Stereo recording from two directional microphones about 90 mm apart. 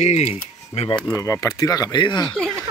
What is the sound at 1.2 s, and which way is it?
Speech, 40° left (ahead or behind).